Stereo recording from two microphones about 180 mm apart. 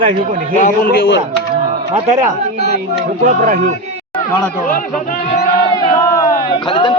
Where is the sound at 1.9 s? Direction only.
40° right (ahead or behind).